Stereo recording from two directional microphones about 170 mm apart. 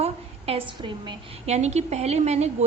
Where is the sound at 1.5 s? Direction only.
40° right (ahead or behind).